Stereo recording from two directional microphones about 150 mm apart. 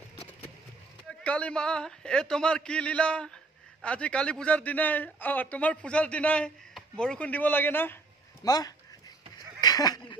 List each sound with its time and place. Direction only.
1.2 s speech: 10° left (ahead or behind)
8.5 s speech: 25° left (ahead or behind)
9.6 s a sound: 25° left (ahead or behind)